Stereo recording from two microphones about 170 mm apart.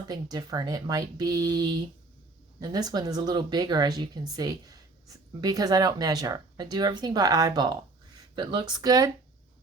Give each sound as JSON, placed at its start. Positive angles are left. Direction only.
{"t": 0.1, "sound": "speech", "side_deg": -25}